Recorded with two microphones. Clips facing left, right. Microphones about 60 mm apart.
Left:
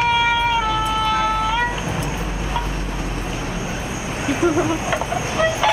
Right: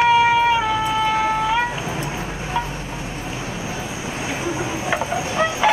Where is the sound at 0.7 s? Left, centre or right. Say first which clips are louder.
Even; centre.